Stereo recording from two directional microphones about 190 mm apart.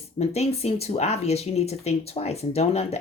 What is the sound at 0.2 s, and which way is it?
Speech, 35° left (ahead or behind).